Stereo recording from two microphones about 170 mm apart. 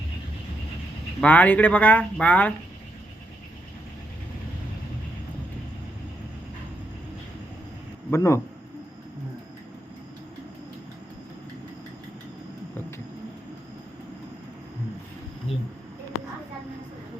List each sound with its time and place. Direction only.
1.2 s speech: 10° left (ahead or behind)
8.1 s speech: 15° left (ahead or behind)